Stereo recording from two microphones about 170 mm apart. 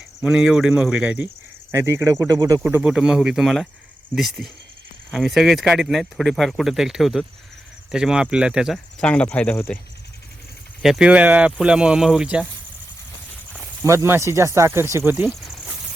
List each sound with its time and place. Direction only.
0.2 s speech: 5° right (ahead or behind); by 2.6 s 20° right (ahead or behind)
2.6 s speech: 5° right (ahead or behind)
10.8 s speech: 5° right (ahead or behind)
13.8 s speech: 15° right (ahead or behind)
15.3 s a sound: centre (ahead or behind)